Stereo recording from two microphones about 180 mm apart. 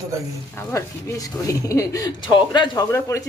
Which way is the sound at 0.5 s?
15° left (ahead or behind).